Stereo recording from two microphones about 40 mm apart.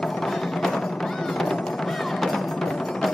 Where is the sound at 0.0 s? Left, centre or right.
Centre.